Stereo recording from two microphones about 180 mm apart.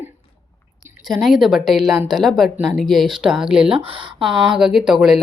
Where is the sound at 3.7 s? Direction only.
30° right (ahead or behind).